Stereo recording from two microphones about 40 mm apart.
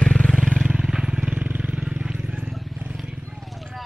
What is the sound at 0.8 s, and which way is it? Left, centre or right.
Vehicle, centre.